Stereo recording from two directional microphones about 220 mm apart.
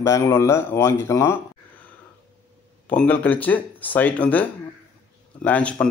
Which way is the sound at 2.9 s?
5° left (ahead or behind).